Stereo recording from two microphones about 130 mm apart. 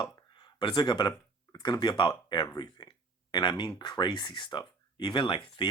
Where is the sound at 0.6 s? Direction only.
35° left (ahead or behind).